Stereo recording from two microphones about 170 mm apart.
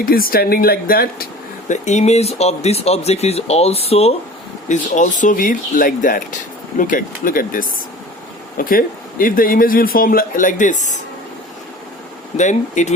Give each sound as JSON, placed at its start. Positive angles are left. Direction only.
{"t": 0.0, "sound": "speech", "side_deg": 60}
{"t": 4.7, "sound": "a man's voice", "side_deg": 45}
{"t": 12.4, "sound": "speech", "side_deg": 45}